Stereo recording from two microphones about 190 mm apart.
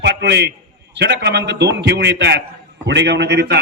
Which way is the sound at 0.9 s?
60° right (ahead or behind).